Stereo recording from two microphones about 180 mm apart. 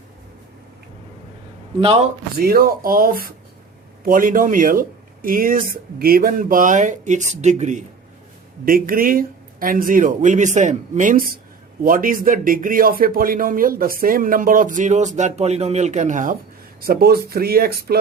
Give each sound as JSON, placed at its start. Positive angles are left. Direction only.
{"t": 1.8, "sound": "a man's voice", "side_deg": -35}
{"t": 2.4, "sound": "speech", "side_deg": -55}
{"t": 8.6, "sound": "speech", "side_deg": -50}
{"t": 16.8, "sound": "speech", "side_deg": -55}